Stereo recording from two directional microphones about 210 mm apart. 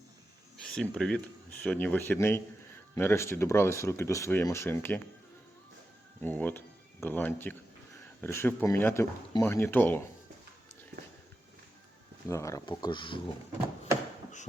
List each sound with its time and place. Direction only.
0.6 s speech: 5° left (ahead or behind)
6.2 s speech: 10° left (ahead or behind)
12.3 s speech: 15° left (ahead or behind)